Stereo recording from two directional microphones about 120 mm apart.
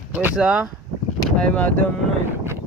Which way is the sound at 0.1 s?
15° right (ahead or behind).